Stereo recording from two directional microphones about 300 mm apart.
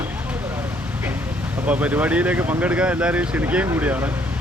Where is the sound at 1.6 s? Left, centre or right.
Centre.